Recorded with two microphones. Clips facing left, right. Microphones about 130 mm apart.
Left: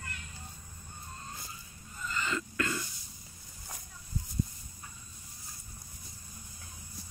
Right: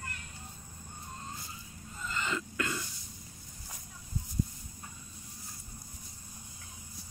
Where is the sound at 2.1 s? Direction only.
20° right (ahead or behind).